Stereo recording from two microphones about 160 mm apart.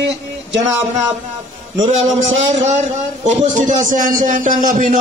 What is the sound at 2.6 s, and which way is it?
A man's voice, 45° right (ahead or behind).